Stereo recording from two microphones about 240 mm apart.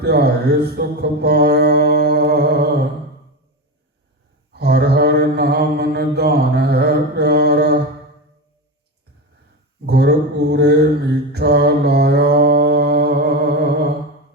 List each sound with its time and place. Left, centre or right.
0.0 s mantra: right
4.5 s mantra: right
9.8 s mantra: right